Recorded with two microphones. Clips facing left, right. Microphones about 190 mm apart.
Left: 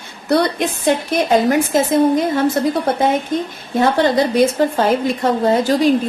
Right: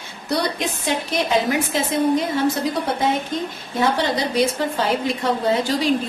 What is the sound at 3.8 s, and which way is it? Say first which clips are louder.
A woman's voice: left 6 dB; 50° left (ahead or behind).